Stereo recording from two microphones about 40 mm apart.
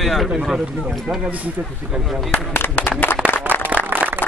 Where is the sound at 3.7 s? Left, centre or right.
Right.